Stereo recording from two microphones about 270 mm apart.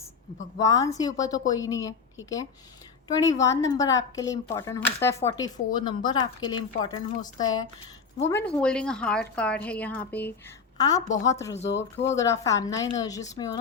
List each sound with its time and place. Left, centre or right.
0.6 s a woman's voice: centre